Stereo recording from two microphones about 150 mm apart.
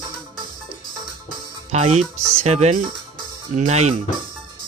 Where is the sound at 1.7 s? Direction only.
45° right (ahead or behind).